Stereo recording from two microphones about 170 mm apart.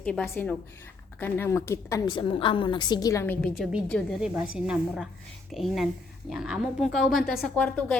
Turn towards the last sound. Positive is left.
turn(degrees=5)  # may be behind; listen again after turning